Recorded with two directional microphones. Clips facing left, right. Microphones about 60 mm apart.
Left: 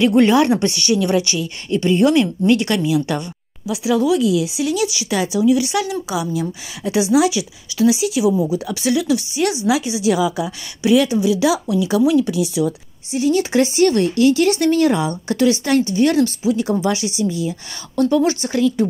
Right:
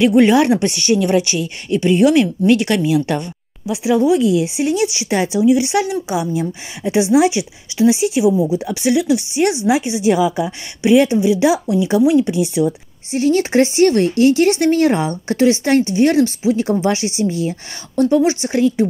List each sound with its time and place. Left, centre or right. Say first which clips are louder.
0.0 s a woman's voice: right 2 dB; centre; by 8.3 s right
8.3 s a woman's voice: right 2 dB; right
17.9 s a woman's voice: right 2 dB; right